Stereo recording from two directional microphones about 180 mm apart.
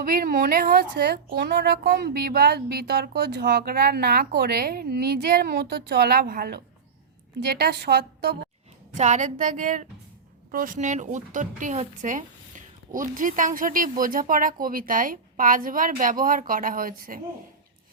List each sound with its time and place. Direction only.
0.0 s a woman's voice: 55° right (ahead or behind)
9.0 s speech: 40° right (ahead or behind)